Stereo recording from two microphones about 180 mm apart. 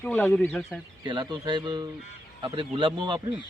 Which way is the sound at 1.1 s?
25° right (ahead or behind).